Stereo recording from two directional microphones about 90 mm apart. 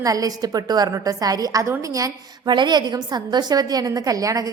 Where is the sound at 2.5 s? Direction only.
55° right (ahead or behind).